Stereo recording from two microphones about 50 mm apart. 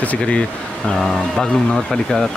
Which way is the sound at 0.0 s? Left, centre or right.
Left.